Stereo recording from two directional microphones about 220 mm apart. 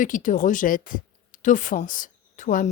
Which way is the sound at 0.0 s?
35° left (ahead or behind).